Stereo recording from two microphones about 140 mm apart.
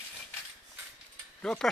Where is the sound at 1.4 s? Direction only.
5° left (ahead or behind).